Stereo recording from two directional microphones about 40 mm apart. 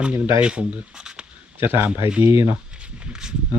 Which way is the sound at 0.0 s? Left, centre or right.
Right.